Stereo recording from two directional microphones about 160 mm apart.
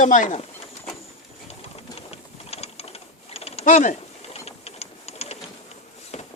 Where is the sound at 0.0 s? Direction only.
50° left (ahead or behind).